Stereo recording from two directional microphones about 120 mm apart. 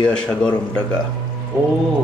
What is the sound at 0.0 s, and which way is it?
Speech, 10° left (ahead or behind).